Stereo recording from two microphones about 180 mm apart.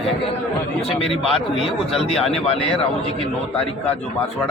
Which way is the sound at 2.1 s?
Centre (ahead or behind).